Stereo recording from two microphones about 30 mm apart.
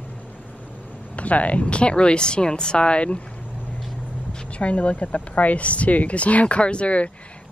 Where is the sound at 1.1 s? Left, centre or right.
Left.